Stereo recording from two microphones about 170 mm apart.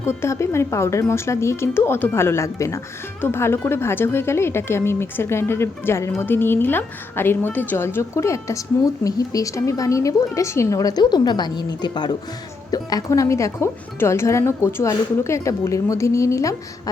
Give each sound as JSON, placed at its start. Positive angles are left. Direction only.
{"t": 0.0, "sound": "a woman's voice", "side_deg": 15}